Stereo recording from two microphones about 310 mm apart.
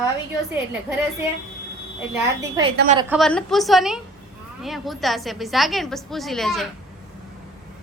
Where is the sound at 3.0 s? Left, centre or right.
Centre.